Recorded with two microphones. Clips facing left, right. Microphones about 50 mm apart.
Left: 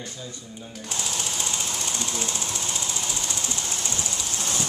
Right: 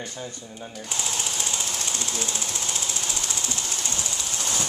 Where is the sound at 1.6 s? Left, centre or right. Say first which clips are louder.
Even; left.